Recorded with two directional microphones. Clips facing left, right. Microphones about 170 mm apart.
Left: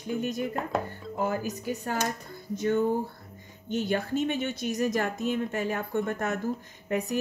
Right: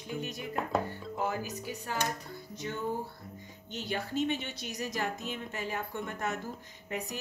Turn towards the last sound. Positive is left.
turn(degrees=50)  # may be behind; listen again after turning